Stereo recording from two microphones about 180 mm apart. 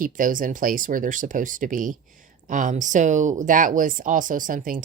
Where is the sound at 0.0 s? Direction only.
50° right (ahead or behind).